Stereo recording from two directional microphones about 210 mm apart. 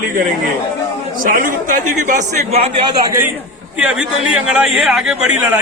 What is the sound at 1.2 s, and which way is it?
Speech, 40° right (ahead or behind).